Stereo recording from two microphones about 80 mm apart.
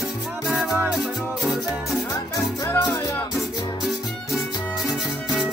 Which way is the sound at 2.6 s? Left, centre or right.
Left.